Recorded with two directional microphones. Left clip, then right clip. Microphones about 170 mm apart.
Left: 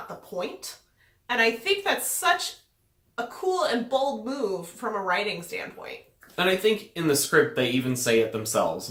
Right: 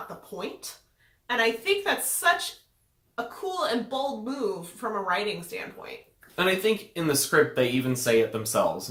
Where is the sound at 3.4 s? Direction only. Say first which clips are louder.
Left 7 dB; 15° left (ahead or behind).